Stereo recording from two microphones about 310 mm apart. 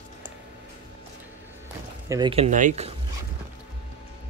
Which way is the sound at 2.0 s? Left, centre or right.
Centre.